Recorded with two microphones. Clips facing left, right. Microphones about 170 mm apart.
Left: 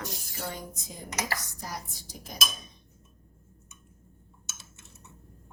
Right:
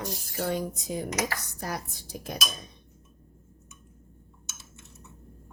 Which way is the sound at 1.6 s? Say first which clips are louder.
Right 5 dB; 60° right (ahead or behind).